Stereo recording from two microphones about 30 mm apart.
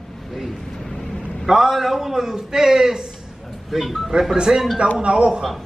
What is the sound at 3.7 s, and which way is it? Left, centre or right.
Speech, centre.